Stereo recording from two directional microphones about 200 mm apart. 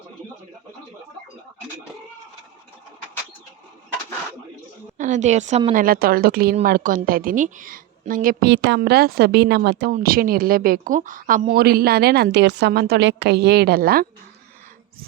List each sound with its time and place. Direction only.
4.9 s a woman's voice: 40° right (ahead or behind)
5.8 s speech: 45° right (ahead or behind)